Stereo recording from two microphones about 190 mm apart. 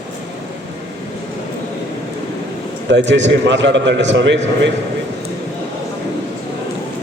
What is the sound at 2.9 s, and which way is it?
A man's voice, 70° right (ahead or behind).